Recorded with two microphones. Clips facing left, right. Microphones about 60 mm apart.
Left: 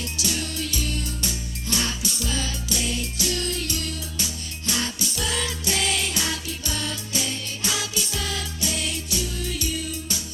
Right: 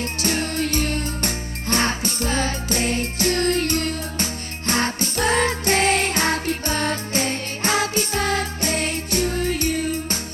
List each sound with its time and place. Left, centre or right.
0.0 s music: right